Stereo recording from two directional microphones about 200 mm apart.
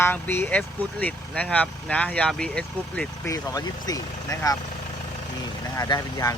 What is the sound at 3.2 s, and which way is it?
Speech, 15° left (ahead or behind).